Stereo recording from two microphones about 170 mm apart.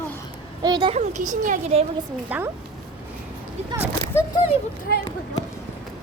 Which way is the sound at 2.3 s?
10° right (ahead or behind).